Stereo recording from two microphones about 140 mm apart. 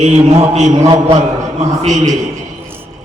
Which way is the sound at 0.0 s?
55° right (ahead or behind).